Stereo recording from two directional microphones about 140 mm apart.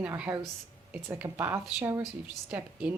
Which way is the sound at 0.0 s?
15° right (ahead or behind).